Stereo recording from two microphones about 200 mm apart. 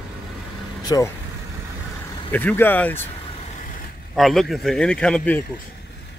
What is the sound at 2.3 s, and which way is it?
Speech, 10° left (ahead or behind).